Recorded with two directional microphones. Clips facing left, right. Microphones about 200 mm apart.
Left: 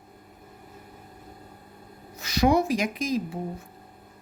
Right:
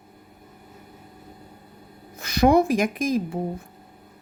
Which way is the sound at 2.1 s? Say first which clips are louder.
Right 4 dB; 55° right (ahead or behind).